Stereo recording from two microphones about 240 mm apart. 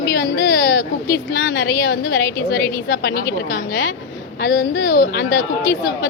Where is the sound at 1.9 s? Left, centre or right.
Left.